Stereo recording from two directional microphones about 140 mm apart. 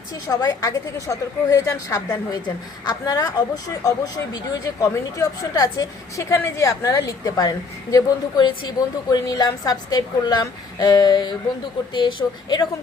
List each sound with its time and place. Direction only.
0.3 s speech: 25° left (ahead or behind)